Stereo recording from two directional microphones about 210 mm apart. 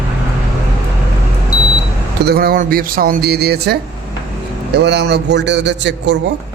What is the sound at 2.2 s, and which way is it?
A man's voice, 45° right (ahead or behind).